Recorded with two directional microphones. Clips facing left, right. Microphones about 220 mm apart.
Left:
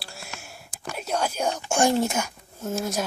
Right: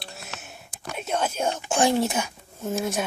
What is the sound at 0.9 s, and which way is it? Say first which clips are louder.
Whispering: even; 5° right (ahead or behind).